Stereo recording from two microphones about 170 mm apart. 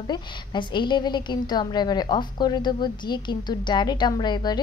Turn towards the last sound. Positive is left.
turn(degrees=25)  # may be behind; listen again after turning